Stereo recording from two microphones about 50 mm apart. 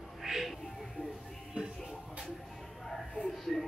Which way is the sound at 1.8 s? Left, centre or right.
Centre.